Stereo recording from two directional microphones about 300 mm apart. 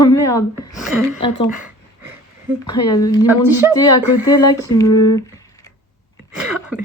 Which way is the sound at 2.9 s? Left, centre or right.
Centre.